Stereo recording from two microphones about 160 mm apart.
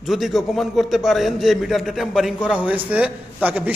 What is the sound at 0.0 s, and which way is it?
A man's voice, centre (ahead or behind).